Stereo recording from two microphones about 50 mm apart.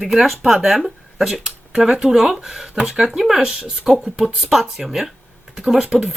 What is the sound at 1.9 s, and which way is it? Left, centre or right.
Speech, centre.